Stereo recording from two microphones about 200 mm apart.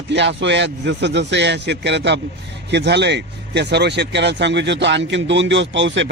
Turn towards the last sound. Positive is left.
turn(degrees=-65)  # may be behind; listen again after turning